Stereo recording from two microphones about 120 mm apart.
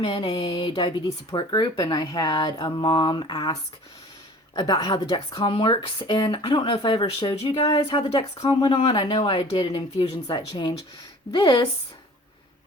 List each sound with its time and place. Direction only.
0.0 s speech: 40° left (ahead or behind)